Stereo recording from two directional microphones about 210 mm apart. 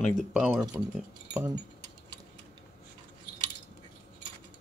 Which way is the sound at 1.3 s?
15° right (ahead or behind).